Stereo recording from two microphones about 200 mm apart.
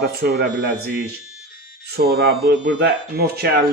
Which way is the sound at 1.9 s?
50° right (ahead or behind).